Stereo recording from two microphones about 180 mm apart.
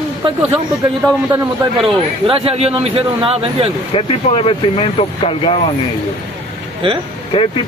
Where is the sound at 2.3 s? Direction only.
30° right (ahead or behind).